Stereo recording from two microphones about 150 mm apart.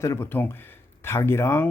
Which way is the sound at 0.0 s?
15° left (ahead or behind).